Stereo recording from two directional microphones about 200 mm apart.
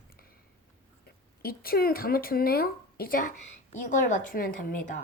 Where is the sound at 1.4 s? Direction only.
50° left (ahead or behind).